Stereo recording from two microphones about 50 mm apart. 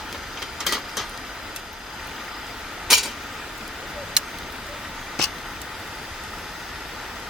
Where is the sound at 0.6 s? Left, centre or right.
Centre.